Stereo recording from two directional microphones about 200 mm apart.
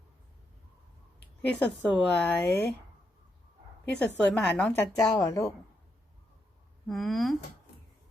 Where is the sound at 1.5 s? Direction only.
5° left (ahead or behind).